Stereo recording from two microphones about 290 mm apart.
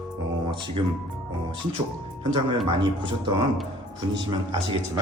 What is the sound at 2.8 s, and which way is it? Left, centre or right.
Speech, centre.